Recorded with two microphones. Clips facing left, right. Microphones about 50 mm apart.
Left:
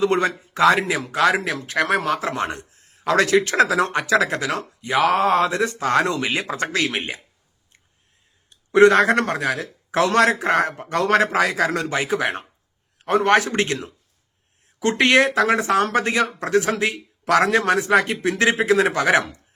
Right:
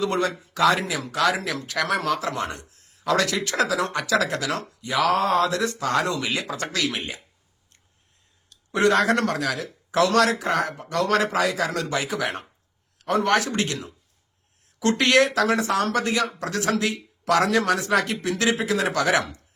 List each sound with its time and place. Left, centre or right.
0.0 s speech: left
8.7 s speech: left